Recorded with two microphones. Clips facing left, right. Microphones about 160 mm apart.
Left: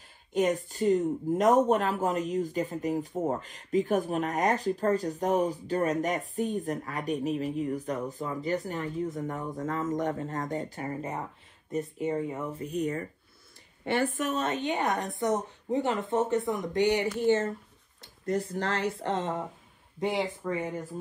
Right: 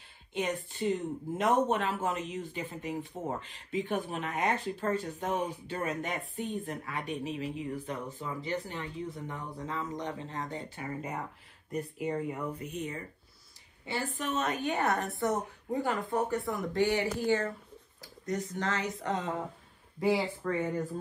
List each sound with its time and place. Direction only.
0.3 s speech: 40° left (ahead or behind); by 12.4 s 20° left (ahead or behind)
12.5 s speech: 35° left (ahead or behind)
13.8 s speech: 55° left (ahead or behind)
14.4 s speech: 25° left (ahead or behind)
18.3 s speech: 35° left (ahead or behind); by 20.8 s 15° left (ahead or behind)